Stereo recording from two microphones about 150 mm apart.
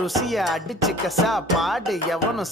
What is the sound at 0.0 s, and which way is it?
Music, centre (ahead or behind).